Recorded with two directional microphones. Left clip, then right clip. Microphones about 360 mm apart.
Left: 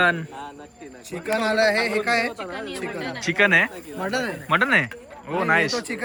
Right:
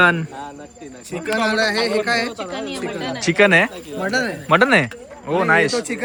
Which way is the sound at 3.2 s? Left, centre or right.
Centre.